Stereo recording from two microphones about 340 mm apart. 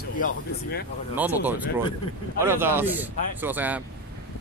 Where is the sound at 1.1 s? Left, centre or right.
Centre.